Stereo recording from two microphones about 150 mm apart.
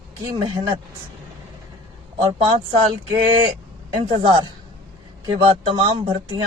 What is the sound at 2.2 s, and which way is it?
Speech, 30° right (ahead or behind).